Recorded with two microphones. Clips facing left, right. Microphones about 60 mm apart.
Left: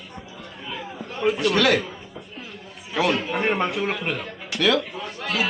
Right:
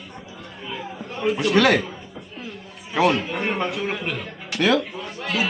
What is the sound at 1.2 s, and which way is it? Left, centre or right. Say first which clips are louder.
Speech: left 1 dB; centre.